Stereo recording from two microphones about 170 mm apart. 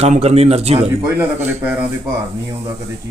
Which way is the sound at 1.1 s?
10° right (ahead or behind).